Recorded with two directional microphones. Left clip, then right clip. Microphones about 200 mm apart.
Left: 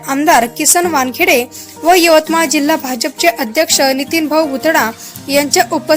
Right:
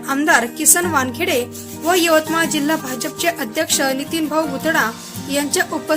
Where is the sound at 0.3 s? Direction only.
30° left (ahead or behind).